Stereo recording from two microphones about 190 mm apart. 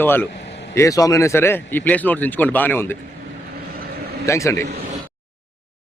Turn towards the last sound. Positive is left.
turn(degrees=15)  # may be behind; listen again after turning